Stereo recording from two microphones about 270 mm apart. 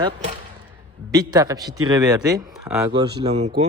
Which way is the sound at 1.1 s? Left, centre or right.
Centre.